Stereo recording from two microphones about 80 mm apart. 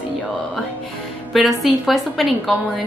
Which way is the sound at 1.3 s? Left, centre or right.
Centre.